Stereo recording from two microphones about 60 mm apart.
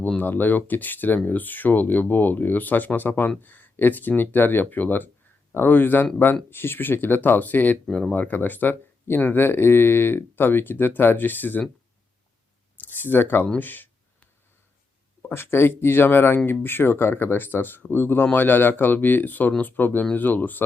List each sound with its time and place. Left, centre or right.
0.2 s speech: left
7.9 s speech: centre
8.1 s speech: left
12.7 s a sound: left
13.6 s speech: left
15.2 s speech: left